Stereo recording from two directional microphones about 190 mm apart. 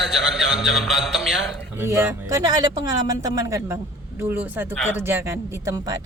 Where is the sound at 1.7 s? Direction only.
15° right (ahead or behind).